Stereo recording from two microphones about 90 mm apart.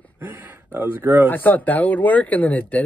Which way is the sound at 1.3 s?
20° left (ahead or behind).